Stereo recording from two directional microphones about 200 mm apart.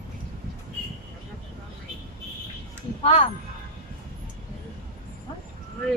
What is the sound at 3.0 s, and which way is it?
Speech, 30° left (ahead or behind).